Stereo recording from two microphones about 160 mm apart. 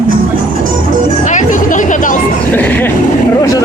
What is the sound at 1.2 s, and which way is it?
Music, 50° left (ahead or behind).